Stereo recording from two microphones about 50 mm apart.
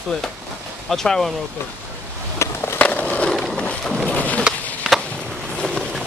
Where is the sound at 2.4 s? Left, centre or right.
Left.